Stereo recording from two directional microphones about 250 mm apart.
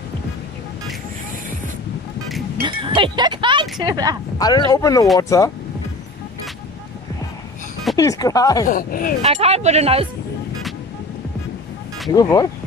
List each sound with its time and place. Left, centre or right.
2.6 s music: centre
3.8 s speech: centre
4.4 s speech: centre
7.9 s speech: centre
8.6 s speech: left
9.2 s speech: right
12.1 s speech: centre